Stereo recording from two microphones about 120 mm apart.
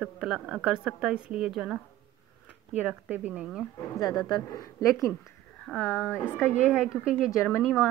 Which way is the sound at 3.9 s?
30° left (ahead or behind).